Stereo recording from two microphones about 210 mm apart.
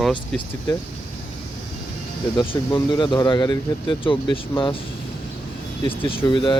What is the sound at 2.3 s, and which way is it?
Speech, 25° left (ahead or behind).